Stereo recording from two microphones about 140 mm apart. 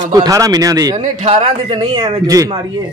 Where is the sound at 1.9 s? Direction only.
25° right (ahead or behind).